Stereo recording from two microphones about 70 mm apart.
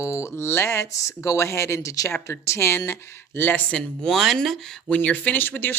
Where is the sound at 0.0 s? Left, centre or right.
Left.